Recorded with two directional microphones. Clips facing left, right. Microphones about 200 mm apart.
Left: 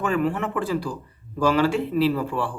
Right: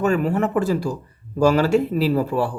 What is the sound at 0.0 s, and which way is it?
Speech, 40° right (ahead or behind).